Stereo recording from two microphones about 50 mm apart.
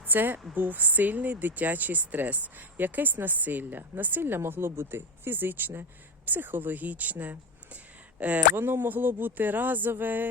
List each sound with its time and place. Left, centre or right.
0.0 s a woman's voice: right
4.4 s speech: right
8.4 s speech: right